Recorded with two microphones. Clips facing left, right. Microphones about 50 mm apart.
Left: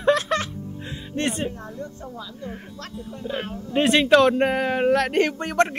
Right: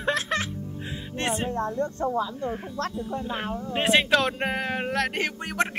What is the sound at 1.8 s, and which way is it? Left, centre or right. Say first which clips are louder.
Speech: right 8 dB; right.